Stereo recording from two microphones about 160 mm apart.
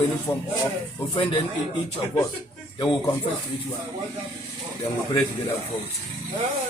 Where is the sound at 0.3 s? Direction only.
10° left (ahead or behind).